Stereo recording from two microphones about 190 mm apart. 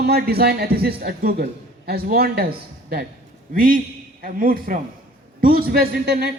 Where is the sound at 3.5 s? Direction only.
50° right (ahead or behind).